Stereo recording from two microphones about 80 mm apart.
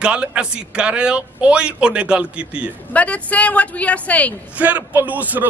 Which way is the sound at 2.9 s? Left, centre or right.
Centre.